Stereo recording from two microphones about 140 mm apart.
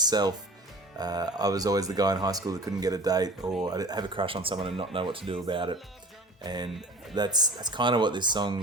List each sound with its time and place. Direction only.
0.0 s speech: 30° right (ahead or behind)
6.7 s speech: centre (ahead or behind)
7.2 s speech: 30° right (ahead or behind)